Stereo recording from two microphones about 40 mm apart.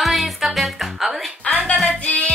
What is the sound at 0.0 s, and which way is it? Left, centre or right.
Music, centre.